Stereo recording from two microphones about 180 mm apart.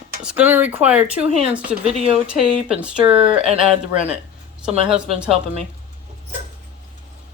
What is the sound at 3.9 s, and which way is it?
Speech, 5° right (ahead or behind).